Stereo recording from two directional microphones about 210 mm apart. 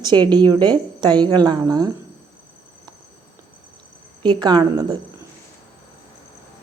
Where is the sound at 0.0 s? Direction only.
20° right (ahead or behind).